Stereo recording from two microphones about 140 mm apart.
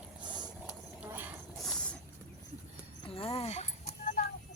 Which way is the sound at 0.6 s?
5° right (ahead or behind).